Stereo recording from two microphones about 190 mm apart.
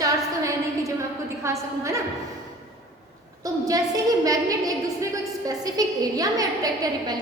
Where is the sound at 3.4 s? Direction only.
20° right (ahead or behind).